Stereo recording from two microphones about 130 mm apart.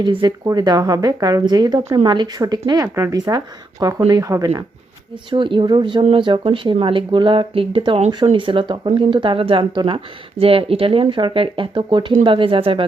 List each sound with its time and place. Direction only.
0.0 s speech: 35° right (ahead or behind)
5.3 s speech: 40° right (ahead or behind)